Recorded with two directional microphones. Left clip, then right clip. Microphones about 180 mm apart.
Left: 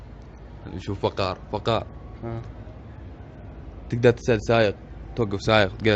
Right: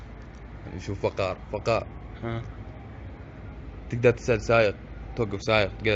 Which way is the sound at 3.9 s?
40° left (ahead or behind).